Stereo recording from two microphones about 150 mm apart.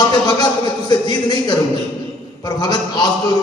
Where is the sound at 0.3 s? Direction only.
25° left (ahead or behind).